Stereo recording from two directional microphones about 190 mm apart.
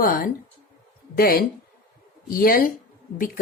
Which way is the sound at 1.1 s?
50° left (ahead or behind).